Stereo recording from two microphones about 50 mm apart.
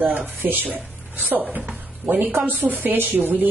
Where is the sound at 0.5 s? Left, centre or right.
Right.